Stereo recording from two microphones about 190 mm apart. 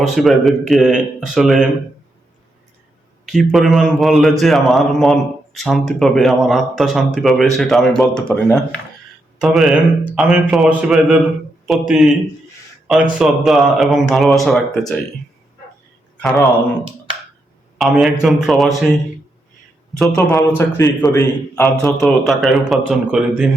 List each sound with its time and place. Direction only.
0.0 s a man's voice: centre (ahead or behind)
3.2 s a man's voice: centre (ahead or behind)
16.1 s speech: centre (ahead or behind)
17.7 s a man's voice: centre (ahead or behind)
20.0 s a man's voice: centre (ahead or behind)
20.6 s a man's voice: 15° left (ahead or behind)
21.6 s a man's voice: centre (ahead or behind)